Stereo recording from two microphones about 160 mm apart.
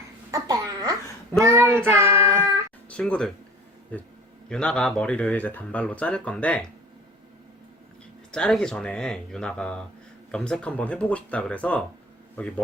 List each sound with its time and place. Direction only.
0.3 s babbling: 20° right (ahead or behind)
2.0 s child singing: 15° right (ahead or behind)
2.9 s speech: 5° left (ahead or behind)
8.3 s speech: 5° left (ahead or behind)